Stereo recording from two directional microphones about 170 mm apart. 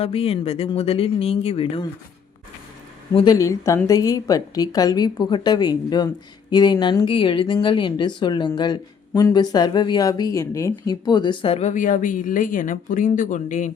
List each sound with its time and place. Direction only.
0.0 s speech: 35° left (ahead or behind)
3.2 s speech: 20° left (ahead or behind)
11.7 s speech: 50° left (ahead or behind)